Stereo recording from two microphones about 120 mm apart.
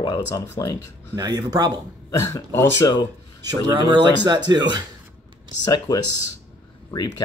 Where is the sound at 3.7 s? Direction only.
40° right (ahead or behind).